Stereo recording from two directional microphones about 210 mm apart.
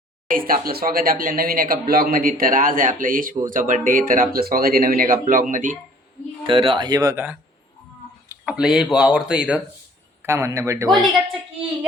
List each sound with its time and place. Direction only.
0.3 s speech: 45° right (ahead or behind)
6.4 s a man's voice: 25° right (ahead or behind)